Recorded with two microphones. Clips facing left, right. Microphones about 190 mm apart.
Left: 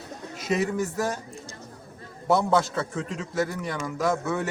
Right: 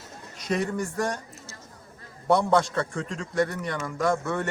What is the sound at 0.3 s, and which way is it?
Speech, 5° left (ahead or behind).